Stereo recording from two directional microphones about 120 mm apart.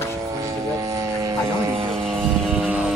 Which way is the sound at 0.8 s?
25° right (ahead or behind).